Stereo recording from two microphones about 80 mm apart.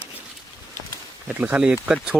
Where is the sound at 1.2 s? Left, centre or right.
Centre.